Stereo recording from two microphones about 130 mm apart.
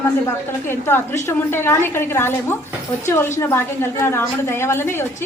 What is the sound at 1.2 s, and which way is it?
A woman's voice, 20° left (ahead or behind).